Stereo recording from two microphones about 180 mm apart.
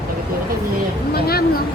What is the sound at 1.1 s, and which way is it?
Speech, 60° left (ahead or behind).